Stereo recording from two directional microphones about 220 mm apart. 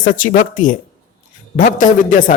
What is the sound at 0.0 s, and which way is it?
A man's voice, 35° left (ahead or behind).